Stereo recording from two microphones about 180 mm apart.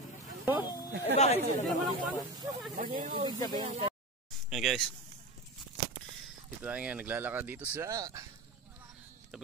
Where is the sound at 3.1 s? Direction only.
25° right (ahead or behind).